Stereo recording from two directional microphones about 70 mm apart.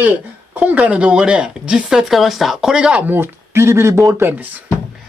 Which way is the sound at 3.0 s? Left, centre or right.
Right.